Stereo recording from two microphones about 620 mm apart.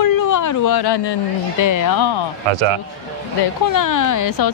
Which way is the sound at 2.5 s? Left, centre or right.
Right.